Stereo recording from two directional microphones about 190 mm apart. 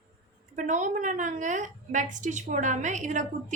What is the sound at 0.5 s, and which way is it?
A woman's voice, 40° right (ahead or behind).